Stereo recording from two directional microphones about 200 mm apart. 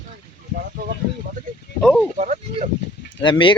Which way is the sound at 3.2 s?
25° left (ahead or behind).